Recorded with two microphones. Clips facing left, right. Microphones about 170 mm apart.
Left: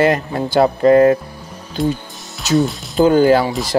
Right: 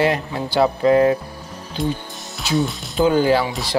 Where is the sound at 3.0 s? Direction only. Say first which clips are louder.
Left 5 dB; 50° left (ahead or behind).